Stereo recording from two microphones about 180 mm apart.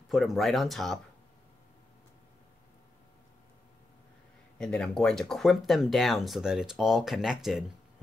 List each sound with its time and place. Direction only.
0.1 s speech: centre (ahead or behind)
4.6 s speech: 5° left (ahead or behind)